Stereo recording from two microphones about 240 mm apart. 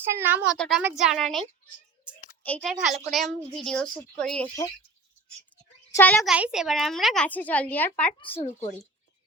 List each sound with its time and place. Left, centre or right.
0.1 s speech: centre
0.5 s a woman's voice: centre
5.9 s a child's voice: centre
6.3 s a woman's voice: centre
8.2 s speech: left